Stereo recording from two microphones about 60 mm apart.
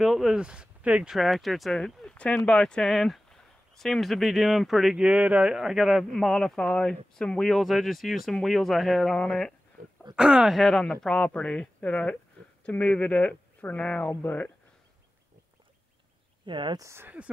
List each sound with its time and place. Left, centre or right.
0.0 s a man's voice: centre
0.4 s speech: centre
1.1 s a man's voice: centre
2.0 s speech: centre
4.9 s speech: centre
5.5 s a man's voice: centre
7.5 s a man's voice: centre
10.1 s speech: centre
10.5 s a man's voice: centre
17.2 s speech: right